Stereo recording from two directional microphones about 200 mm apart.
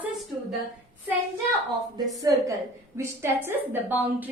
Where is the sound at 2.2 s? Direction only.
15° right (ahead or behind).